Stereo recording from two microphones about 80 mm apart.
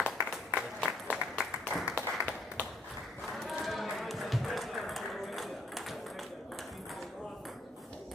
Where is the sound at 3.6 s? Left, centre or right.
Centre.